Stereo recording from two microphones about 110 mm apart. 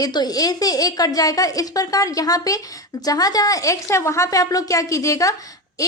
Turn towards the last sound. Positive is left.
turn(degrees=30)  # may be behind; listen again after turning